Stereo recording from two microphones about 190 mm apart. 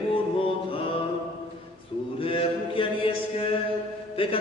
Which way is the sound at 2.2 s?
30° left (ahead or behind).